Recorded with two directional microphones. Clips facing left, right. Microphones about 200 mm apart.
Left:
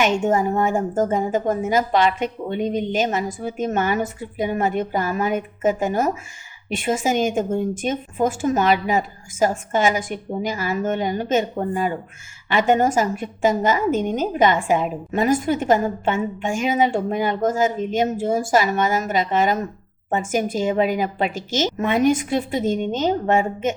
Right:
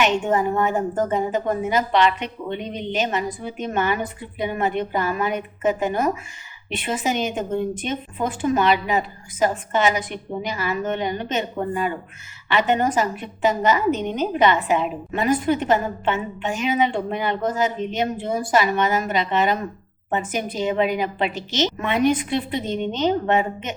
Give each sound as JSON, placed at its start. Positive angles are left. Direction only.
{"t": 0.5, "sound": "speech", "side_deg": 10}
{"t": 1.1, "sound": "a woman's voice", "side_deg": 45}
{"t": 6.7, "sound": "a woman's voice", "side_deg": 45}